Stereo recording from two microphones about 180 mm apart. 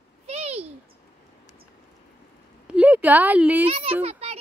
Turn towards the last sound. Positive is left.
turn(degrees=-35)  # may be behind; listen again after turning